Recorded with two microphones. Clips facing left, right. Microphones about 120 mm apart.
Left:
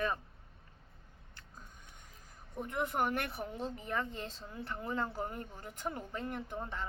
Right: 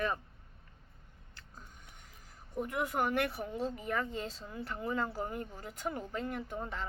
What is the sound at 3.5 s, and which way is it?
Speech, 15° right (ahead or behind).